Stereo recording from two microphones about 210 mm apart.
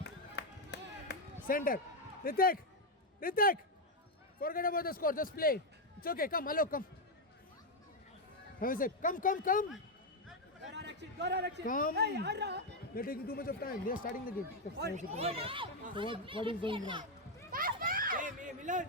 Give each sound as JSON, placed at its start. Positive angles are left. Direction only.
{"t": 0.0, "sound": "music", "side_deg": 55}
{"t": 1.5, "sound": "a man's voice", "side_deg": 40}
{"t": 8.5, "sound": "speech", "side_deg": 40}
{"t": 10.7, "sound": "a sound", "side_deg": -55}
{"t": 11.6, "sound": "speech", "side_deg": 40}
{"t": 11.9, "sound": "a woman's voice", "side_deg": -50}
{"t": 12.9, "sound": "speech", "side_deg": 45}
{"t": 14.9, "sound": "speech", "side_deg": -30}
{"t": 17.5, "sound": "children playing", "side_deg": -40}